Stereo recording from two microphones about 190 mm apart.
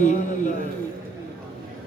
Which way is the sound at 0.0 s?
40° left (ahead or behind).